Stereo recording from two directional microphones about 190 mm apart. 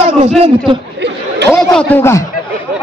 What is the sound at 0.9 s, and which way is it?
Chatter, 65° right (ahead or behind).